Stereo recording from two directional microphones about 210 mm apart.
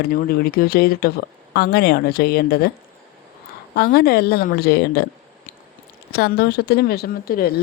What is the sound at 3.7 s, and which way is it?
Speech, 50° left (ahead or behind).